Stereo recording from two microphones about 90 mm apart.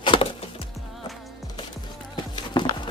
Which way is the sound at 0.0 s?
65° left (ahead or behind).